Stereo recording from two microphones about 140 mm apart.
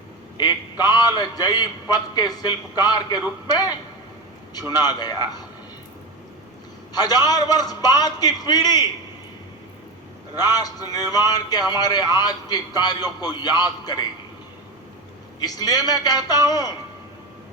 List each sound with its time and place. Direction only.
0.3 s a man's voice: 30° left (ahead or behind)
4.8 s a man's voice: 30° left (ahead or behind)
6.9 s a man's voice: 30° left (ahead or behind)
10.3 s a man's voice: 25° left (ahead or behind)
15.4 s a man's voice: 25° left (ahead or behind)